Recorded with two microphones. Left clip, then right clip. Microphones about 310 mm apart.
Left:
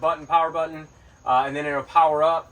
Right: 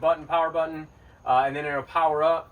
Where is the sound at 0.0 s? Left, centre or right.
Centre.